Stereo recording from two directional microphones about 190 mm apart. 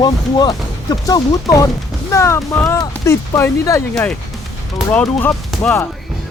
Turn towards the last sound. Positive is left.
turn(degrees=0)  # may be behind; listen again after turning